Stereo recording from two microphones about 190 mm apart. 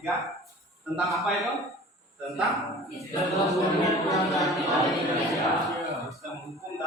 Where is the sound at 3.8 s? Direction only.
15° left (ahead or behind).